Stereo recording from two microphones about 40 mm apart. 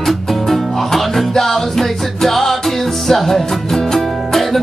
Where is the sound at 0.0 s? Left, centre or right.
Centre.